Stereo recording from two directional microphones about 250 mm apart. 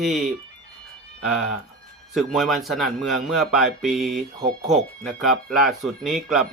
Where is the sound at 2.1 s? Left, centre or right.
Centre.